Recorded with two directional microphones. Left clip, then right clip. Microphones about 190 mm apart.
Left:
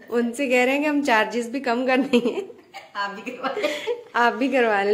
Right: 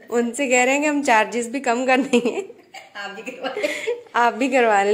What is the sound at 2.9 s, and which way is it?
Speech, 45° left (ahead or behind).